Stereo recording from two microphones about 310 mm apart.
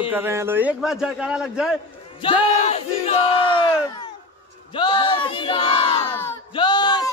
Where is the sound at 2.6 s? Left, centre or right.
Left.